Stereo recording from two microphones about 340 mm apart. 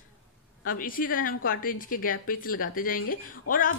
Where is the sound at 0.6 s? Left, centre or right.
Left.